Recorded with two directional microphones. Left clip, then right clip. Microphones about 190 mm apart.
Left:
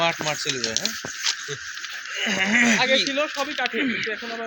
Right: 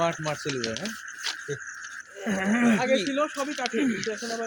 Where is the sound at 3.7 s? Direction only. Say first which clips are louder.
Left 3 dB; 65° right (ahead or behind).